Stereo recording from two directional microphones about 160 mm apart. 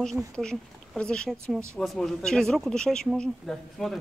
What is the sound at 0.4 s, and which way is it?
Speech, 5° left (ahead or behind).